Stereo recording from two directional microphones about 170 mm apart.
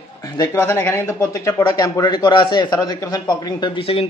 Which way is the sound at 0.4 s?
15° left (ahead or behind).